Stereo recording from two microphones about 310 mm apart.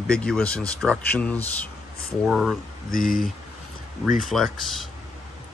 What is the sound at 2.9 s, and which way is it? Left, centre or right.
Speech, left.